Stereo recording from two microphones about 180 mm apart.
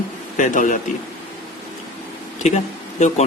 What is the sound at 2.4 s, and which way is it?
Speech, 35° left (ahead or behind).